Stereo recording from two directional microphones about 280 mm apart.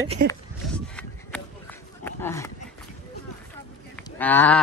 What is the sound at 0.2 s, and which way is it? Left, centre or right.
Speech, right.